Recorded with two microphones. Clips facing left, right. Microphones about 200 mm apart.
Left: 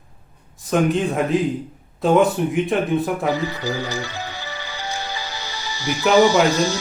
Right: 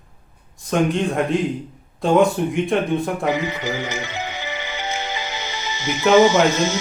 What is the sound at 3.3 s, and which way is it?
Music, 20° right (ahead or behind).